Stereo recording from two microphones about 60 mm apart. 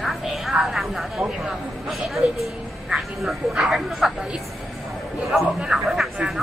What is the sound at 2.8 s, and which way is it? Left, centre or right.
Speech, centre.